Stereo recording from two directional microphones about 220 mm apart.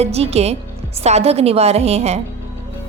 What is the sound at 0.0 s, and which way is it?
A woman's voice, 30° right (ahead or behind).